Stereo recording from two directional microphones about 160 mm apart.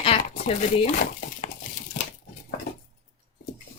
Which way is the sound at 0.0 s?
40° left (ahead or behind).